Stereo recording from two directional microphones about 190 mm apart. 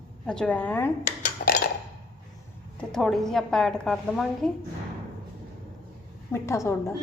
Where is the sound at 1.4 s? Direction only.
45° left (ahead or behind).